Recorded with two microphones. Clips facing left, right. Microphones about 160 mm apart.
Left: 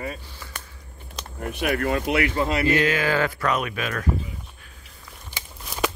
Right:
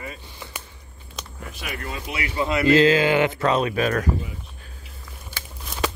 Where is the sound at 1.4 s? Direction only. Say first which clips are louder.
Left 10 dB; 55° left (ahead or behind).